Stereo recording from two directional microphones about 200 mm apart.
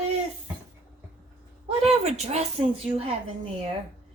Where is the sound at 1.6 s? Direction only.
30° right (ahead or behind).